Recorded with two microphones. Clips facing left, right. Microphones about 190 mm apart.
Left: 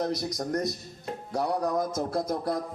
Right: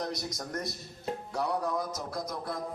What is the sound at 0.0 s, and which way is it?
Speech, 20° left (ahead or behind).